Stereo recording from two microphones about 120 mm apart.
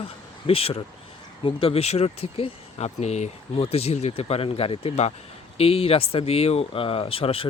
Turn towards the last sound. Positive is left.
turn(degrees=50)  # may be behind; listen again after turning